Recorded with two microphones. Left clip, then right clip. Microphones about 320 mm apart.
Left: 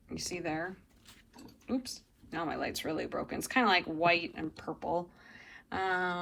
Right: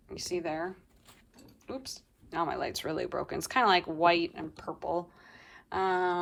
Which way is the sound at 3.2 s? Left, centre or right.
Right.